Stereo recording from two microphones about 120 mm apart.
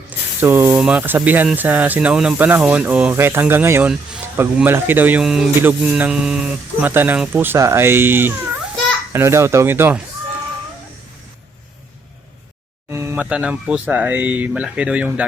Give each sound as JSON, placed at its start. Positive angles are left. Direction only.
{"t": 0.3, "sound": "speech", "side_deg": -20}
{"t": 5.2, "sound": "music", "side_deg": -5}
{"t": 5.5, "sound": "speech", "side_deg": -15}
{"t": 12.9, "sound": "a sound", "side_deg": -20}
{"t": 13.2, "sound": "speech", "side_deg": -10}